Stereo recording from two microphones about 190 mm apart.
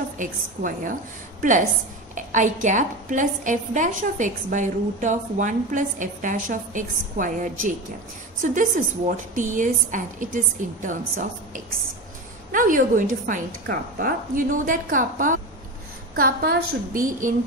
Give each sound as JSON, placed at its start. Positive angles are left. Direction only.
{"t": 0.2, "sound": "a woman's voice", "side_deg": -45}
{"t": 2.1, "sound": "a woman's voice", "side_deg": -40}